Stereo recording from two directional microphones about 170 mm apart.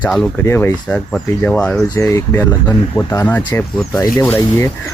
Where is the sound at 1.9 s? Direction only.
15° left (ahead or behind).